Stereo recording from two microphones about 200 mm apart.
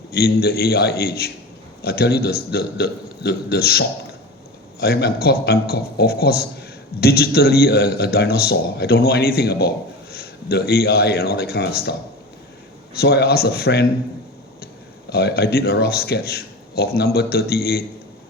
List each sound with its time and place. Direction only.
0.1 s a man's voice: 50° left (ahead or behind)
15.1 s a man's voice: 50° left (ahead or behind)